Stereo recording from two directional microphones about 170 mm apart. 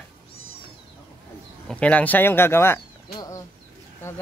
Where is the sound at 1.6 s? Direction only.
5° left (ahead or behind).